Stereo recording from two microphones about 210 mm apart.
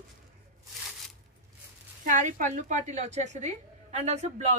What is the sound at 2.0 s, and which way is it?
A woman's voice, 35° right (ahead or behind).